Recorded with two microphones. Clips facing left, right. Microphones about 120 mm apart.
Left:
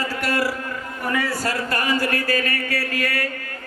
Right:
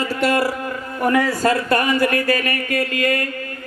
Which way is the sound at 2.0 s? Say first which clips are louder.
Right 4 dB; 35° left (ahead or behind).